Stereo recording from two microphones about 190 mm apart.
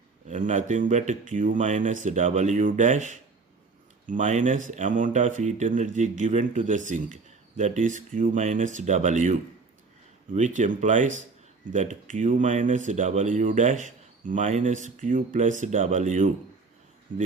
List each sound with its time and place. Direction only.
0.3 s speech: 40° right (ahead or behind)